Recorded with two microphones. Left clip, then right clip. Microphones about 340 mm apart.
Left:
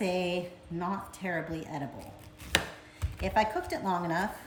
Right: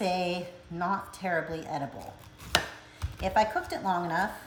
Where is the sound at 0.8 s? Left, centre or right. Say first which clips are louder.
Right 5 dB; centre.